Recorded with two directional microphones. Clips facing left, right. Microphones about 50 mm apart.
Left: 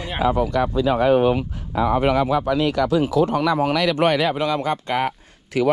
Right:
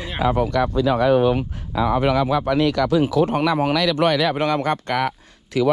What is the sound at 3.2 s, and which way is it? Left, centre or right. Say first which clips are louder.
Speech: even; right.